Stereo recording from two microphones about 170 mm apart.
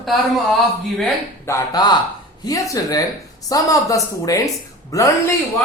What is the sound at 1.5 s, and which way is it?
Speech, 25° left (ahead or behind).